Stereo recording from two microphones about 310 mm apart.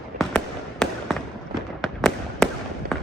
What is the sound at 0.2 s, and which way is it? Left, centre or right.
Fireworks, centre.